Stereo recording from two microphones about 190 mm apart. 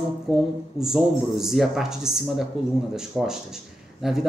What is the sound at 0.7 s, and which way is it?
A man's voice, centre (ahead or behind).